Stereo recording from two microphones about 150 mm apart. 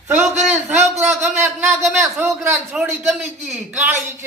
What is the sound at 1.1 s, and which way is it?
A man's voice, 15° right (ahead or behind).